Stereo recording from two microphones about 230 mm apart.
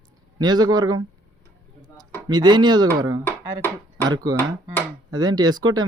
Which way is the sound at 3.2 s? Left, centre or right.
Centre.